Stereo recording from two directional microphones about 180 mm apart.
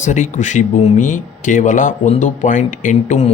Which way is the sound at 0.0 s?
45° left (ahead or behind).